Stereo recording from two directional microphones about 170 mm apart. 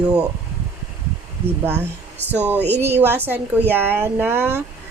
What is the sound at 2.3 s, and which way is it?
Speech, 10° right (ahead or behind).